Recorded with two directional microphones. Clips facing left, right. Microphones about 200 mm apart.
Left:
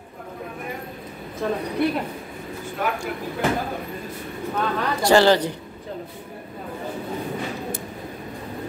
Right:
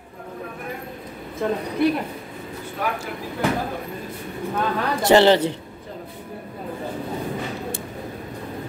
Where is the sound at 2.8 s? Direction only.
Centre (ahead or behind).